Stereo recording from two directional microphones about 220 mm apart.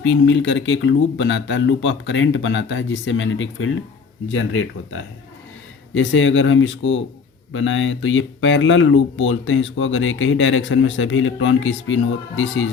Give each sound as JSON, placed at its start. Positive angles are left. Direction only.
{"t": 0.0, "sound": "speech", "side_deg": 60}